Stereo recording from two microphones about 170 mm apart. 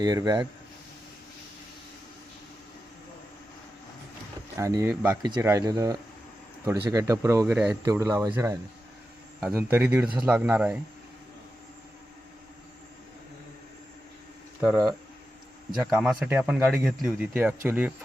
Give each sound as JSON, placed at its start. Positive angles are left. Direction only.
{"t": 0.0, "sound": "speech", "side_deg": -20}
{"t": 4.5, "sound": "speech", "side_deg": -15}
{"t": 7.9, "sound": "speech", "side_deg": -20}
{"t": 9.4, "sound": "speech", "side_deg": -5}
{"t": 15.8, "sound": "speech", "side_deg": -5}